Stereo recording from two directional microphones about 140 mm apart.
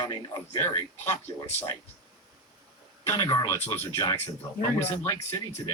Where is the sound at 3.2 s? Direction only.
30° left (ahead or behind).